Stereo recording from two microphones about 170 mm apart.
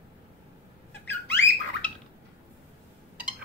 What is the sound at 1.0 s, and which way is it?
Squawk, 10° left (ahead or behind).